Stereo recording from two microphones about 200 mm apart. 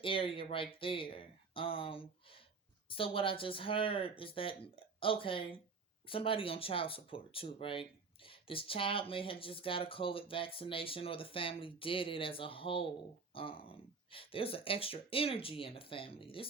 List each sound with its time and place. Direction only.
0.0 s speech: 25° left (ahead or behind)